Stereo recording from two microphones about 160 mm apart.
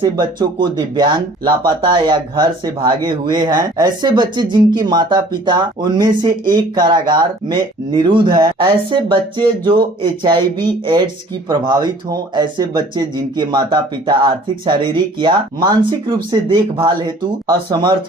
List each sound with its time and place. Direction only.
0.0 s speech: 30° right (ahead or behind)